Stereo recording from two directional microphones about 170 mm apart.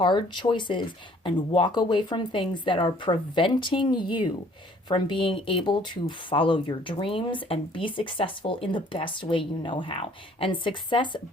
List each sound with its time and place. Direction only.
0.0 s speech: 30° left (ahead or behind)